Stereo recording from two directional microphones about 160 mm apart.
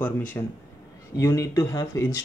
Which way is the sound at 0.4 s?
25° left (ahead or behind).